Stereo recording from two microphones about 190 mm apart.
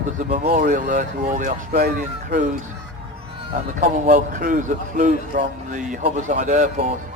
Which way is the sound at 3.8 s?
40° right (ahead or behind).